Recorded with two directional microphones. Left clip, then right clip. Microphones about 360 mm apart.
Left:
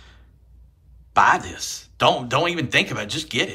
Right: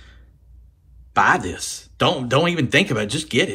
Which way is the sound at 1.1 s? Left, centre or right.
Centre.